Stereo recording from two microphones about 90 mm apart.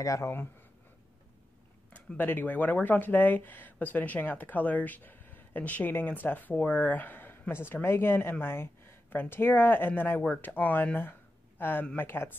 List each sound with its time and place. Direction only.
0.0 s speech: 40° left (ahead or behind)
2.1 s speech: 20° left (ahead or behind)